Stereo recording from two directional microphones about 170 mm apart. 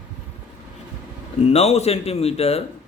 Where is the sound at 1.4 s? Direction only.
35° left (ahead or behind).